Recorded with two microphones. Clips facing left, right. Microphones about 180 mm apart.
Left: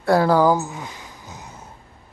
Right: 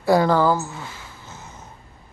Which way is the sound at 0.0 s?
Centre (ahead or behind).